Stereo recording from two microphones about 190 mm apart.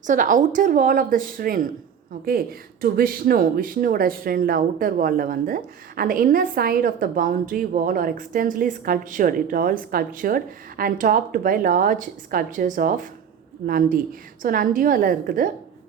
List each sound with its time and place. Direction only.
0.1 s speech: 45° right (ahead or behind)